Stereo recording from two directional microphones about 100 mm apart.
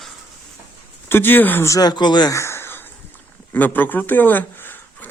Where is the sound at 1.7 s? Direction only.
40° left (ahead or behind).